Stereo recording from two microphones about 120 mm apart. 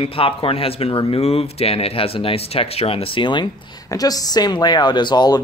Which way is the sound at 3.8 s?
30° left (ahead or behind).